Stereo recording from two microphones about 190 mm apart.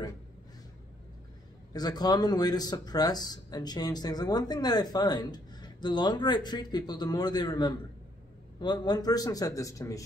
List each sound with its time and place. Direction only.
1.7 s speech: 20° left (ahead or behind)